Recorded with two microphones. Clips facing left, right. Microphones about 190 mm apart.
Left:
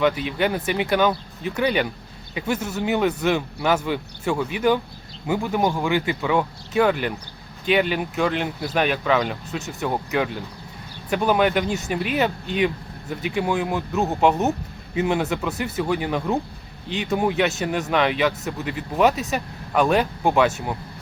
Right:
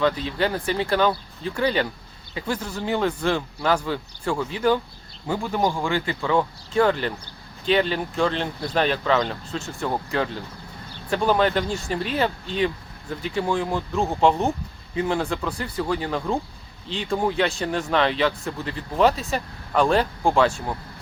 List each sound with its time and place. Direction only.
0.0 s speech: 15° left (ahead or behind)
15.4 s speech: 20° left (ahead or behind)
15.9 s speech: 10° left (ahead or behind)